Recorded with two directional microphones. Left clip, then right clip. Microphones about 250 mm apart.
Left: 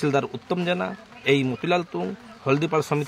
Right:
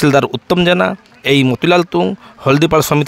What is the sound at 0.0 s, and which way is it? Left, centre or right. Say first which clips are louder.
A man's voice: right 12 dB; right.